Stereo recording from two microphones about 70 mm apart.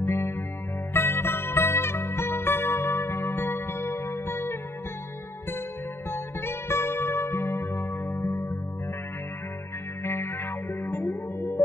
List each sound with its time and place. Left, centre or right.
0.0 s music: left
0.9 s zither: left
6.0 s music: left
10.0 s music: left
11.3 s music: left